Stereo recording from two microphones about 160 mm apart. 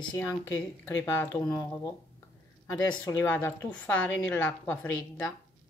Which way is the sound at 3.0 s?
10° left (ahead or behind).